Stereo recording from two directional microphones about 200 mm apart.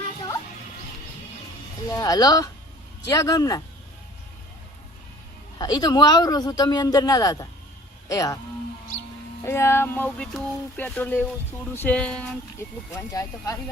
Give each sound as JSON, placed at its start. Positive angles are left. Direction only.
{"t": 1.9, "sound": "speech", "side_deg": 20}
{"t": 5.5, "sound": "a man's voice", "side_deg": 20}
{"t": 9.5, "sound": "speech", "side_deg": 10}
{"t": 13.0, "sound": "speech", "side_deg": 15}